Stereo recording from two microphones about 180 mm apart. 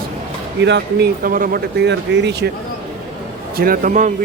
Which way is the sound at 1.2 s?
50° right (ahead or behind).